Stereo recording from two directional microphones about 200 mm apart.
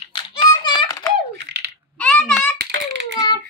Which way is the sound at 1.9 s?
5° left (ahead or behind).